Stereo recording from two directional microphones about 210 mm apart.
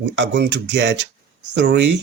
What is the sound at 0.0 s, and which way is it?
Speech, 60° right (ahead or behind).